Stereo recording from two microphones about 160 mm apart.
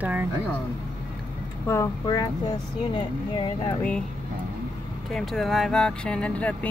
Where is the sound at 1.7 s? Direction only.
20° left (ahead or behind).